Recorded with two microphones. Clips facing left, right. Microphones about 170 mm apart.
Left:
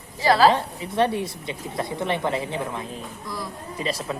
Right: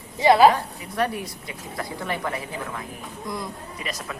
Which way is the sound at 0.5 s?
25° left (ahead or behind).